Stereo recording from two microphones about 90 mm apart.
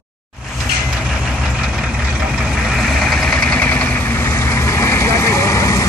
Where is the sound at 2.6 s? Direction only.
Centre (ahead or behind).